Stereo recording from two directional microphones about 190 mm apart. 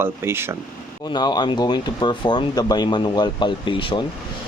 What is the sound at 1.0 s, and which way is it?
Speech, 20° left (ahead or behind).